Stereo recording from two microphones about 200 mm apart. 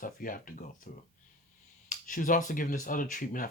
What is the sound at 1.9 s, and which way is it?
Speech, 40° left (ahead or behind).